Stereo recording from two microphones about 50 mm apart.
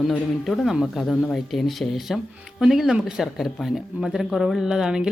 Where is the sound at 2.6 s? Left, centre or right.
Centre.